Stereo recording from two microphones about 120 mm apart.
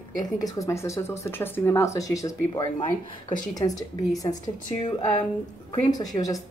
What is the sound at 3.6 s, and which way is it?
Speech, 45° left (ahead or behind).